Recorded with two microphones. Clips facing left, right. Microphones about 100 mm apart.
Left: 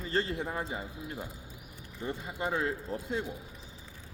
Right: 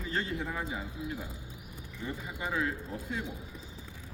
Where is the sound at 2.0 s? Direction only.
35° left (ahead or behind).